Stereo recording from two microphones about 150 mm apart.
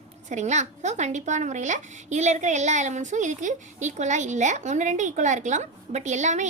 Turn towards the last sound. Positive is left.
turn(degrees=-50)  # may be behind; listen again after turning